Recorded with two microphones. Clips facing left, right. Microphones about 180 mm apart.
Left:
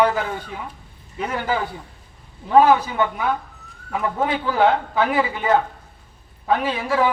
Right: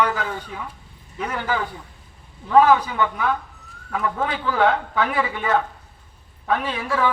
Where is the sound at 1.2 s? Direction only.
30° left (ahead or behind).